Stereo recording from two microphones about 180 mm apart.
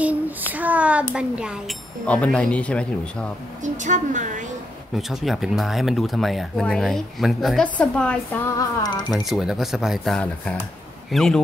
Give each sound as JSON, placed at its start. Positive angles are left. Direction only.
{"t": 0.5, "sound": "a child's voice", "side_deg": -10}
{"t": 2.0, "sound": "speech", "side_deg": 5}
{"t": 3.6, "sound": "a woman's voice", "side_deg": -45}
{"t": 4.9, "sound": "speech", "side_deg": 0}
{"t": 8.5, "sound": "speech", "side_deg": 20}
{"t": 9.1, "sound": "speech", "side_deg": 0}